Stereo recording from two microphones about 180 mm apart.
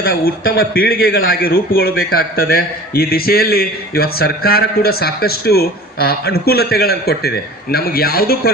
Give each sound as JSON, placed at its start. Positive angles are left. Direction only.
{"t": 0.0, "sound": "a man's voice", "side_deg": 55}